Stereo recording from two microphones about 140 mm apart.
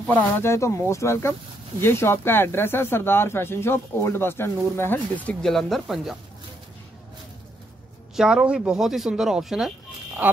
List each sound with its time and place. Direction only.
0.0 s speech: 15° left (ahead or behind)
8.2 s speech: 5° right (ahead or behind)